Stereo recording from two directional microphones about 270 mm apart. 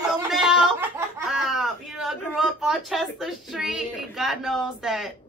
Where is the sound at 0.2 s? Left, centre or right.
Centre.